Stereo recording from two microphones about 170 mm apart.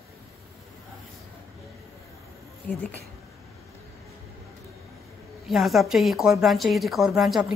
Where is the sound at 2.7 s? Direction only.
5° left (ahead or behind).